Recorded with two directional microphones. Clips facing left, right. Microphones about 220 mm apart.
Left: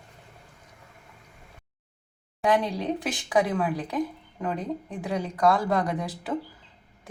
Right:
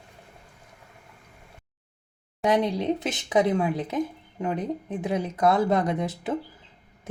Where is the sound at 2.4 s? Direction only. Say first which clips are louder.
Right 2 dB; 25° right (ahead or behind).